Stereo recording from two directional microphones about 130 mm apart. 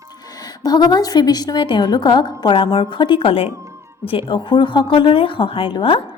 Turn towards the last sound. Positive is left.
turn(degrees=40)  # may be behind; listen again after turning